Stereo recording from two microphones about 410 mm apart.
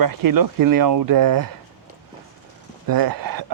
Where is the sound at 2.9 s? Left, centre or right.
Right.